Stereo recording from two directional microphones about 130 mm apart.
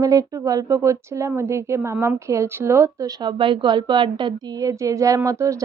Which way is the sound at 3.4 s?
40° right (ahead or behind).